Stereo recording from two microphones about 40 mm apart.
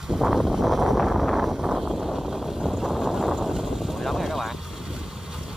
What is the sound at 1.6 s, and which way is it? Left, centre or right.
Vehicle, centre.